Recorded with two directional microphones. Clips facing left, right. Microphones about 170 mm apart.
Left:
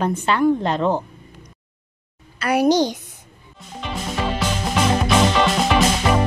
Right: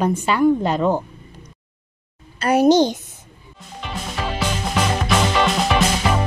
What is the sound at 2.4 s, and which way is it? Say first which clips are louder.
Speech: right 3 dB; 25° right (ahead or behind).